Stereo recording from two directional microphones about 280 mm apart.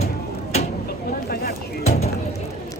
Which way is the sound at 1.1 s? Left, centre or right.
Left.